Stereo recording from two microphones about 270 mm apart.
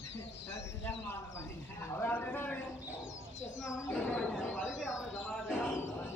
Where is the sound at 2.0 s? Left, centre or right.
Centre.